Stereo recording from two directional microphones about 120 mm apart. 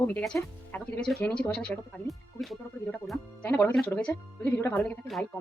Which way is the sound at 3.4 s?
15° left (ahead or behind).